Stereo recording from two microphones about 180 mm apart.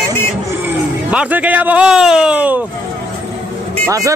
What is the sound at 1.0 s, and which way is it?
Speech, 10° right (ahead or behind).